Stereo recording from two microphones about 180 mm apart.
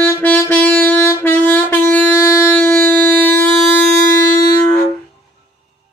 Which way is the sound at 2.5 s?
10° left (ahead or behind).